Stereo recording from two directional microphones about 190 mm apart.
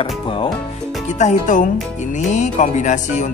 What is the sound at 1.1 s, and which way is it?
Speech, 40° left (ahead or behind).